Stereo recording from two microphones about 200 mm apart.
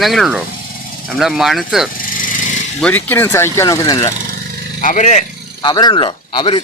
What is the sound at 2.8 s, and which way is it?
Speech, 10° left (ahead or behind).